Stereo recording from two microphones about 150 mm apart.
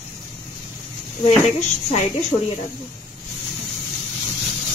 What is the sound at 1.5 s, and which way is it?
Speech, 50° left (ahead or behind).